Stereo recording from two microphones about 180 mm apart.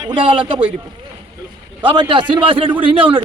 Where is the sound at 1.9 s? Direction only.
25° right (ahead or behind).